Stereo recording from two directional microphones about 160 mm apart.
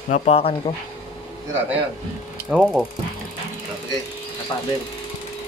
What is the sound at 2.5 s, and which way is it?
Speech, 5° right (ahead or behind).